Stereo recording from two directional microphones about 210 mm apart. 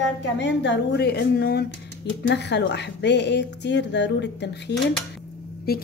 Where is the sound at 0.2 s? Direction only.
55° left (ahead or behind).